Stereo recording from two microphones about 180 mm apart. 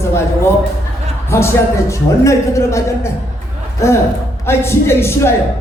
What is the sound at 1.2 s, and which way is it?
A man's voice, 15° left (ahead or behind).